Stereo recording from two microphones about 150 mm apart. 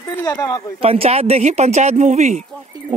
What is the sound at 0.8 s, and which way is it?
Speech, 40° right (ahead or behind).